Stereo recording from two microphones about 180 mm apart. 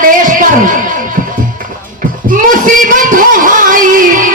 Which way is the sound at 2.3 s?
45° right (ahead or behind).